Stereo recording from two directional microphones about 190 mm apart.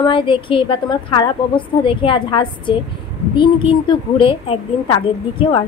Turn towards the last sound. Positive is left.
turn(degrees=25)  # may be behind; listen again after turning